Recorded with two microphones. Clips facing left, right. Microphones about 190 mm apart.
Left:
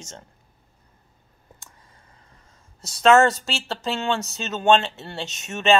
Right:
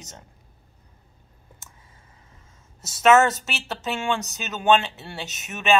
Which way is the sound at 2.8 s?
20° right (ahead or behind).